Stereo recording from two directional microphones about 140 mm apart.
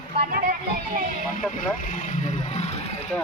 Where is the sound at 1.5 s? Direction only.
75° left (ahead or behind); by 3.0 s 50° left (ahead or behind).